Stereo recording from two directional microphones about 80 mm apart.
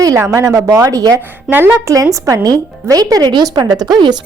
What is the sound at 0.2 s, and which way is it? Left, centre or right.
A woman's voice, right.